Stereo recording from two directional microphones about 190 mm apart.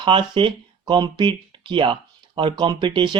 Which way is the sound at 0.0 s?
25° right (ahead or behind).